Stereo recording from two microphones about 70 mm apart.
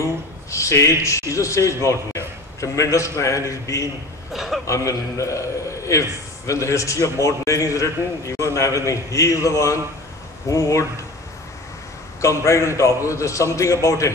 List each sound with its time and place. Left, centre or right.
0.0 s speech: left
4.3 s a sound: centre
4.6 s a man's voice: left
12.2 s a man's voice: left